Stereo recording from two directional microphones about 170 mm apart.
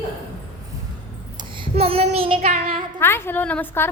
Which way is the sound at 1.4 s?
35° right (ahead or behind).